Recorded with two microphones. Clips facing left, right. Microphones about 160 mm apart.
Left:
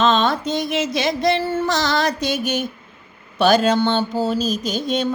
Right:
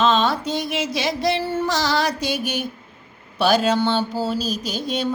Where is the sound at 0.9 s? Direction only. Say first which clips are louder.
Left 2 dB; 10° right (ahead or behind).